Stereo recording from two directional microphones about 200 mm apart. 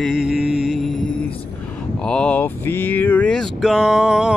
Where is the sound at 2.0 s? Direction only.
5° left (ahead or behind).